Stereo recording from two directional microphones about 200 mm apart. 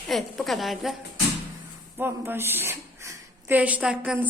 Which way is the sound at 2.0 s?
10° right (ahead or behind).